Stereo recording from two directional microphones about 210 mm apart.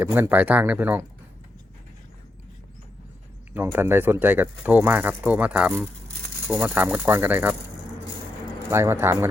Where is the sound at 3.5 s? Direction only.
10° right (ahead or behind).